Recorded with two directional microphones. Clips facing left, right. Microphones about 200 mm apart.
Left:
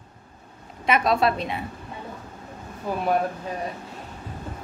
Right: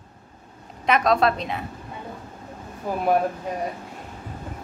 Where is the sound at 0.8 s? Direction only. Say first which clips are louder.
Right 1 dB; 5° left (ahead or behind).